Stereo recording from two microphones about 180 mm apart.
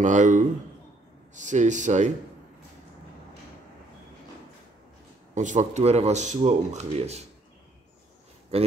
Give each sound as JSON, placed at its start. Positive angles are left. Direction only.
{"t": 0.0, "sound": "speech", "side_deg": -45}
{"t": 5.3, "sound": "speech", "side_deg": -45}
{"t": 8.5, "sound": "speech", "side_deg": -35}